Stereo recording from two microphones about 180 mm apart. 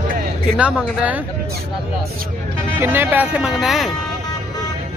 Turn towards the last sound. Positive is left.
turn(degrees=0)  # may be behind; listen again after turning